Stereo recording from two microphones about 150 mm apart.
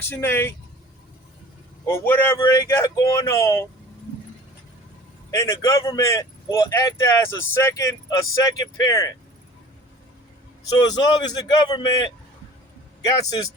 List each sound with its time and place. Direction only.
0.0 s speech: 15° left (ahead or behind)
1.9 s speech: 15° left (ahead or behind)
5.3 s speech: 20° left (ahead or behind)
10.7 s a man's voice: 25° left (ahead or behind)